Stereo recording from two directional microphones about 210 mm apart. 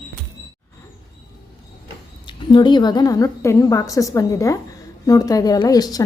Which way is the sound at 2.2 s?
20° left (ahead or behind).